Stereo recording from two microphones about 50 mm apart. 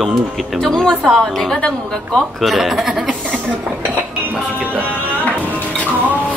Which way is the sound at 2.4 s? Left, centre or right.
Centre.